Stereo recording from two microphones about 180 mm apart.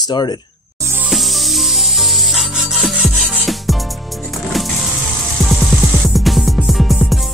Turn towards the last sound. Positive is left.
turn(degrees=0)  # may be behind; listen again after turning